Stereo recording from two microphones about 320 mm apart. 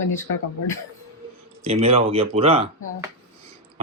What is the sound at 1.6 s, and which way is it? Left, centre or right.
Speech, centre.